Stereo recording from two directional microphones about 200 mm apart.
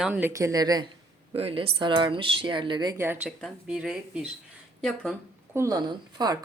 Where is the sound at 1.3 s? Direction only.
30° right (ahead or behind); by 5.1 s centre (ahead or behind).